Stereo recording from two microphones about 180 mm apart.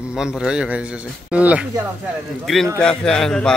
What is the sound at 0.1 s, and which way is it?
A man's voice, 5° right (ahead or behind).